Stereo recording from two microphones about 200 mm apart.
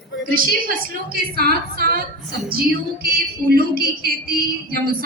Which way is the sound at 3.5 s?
45° right (ahead or behind).